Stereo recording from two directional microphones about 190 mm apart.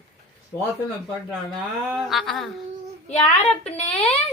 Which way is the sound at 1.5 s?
Centre (ahead or behind).